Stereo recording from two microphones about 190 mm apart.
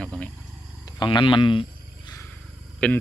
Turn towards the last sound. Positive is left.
turn(degrees=5)  # may be behind; listen again after turning